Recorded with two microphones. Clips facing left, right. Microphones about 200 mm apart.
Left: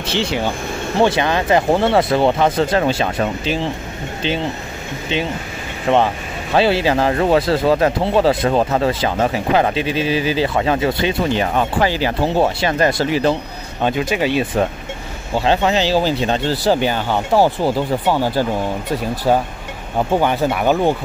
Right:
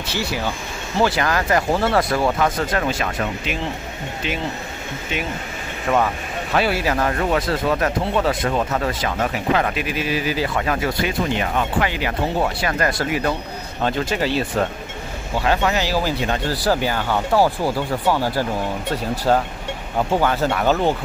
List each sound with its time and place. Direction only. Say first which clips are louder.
0.1 s speech: left 5 dB; 25° left (ahead or behind)
5.1 s speech: left 5 dB; 30° left (ahead or behind)
13.8 s speech: left 3 dB; 15° left (ahead or behind)
19.3 s speech: left 2 dB; 10° left (ahead or behind)